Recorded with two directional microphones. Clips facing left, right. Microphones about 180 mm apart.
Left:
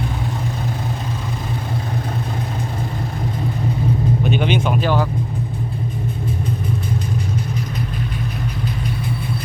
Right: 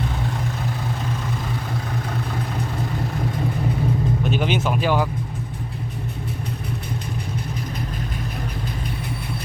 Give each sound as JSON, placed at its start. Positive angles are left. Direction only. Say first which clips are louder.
{"t": 4.2, "sound": "speech", "louder": "left 3 dB", "side_deg": 0}